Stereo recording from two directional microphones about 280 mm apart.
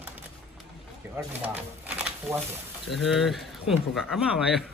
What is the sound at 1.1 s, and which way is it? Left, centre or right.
Speech, centre.